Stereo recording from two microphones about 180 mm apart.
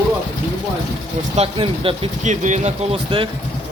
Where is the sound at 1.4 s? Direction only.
30° right (ahead or behind).